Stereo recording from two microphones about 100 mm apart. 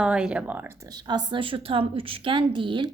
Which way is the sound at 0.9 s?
45° right (ahead or behind).